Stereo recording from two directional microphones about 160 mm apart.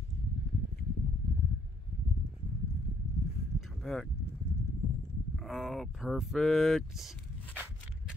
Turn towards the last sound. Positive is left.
turn(degrees=0)  # may be behind; listen again after turning